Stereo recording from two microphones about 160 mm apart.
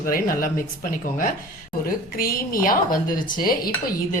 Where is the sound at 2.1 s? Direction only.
65° left (ahead or behind).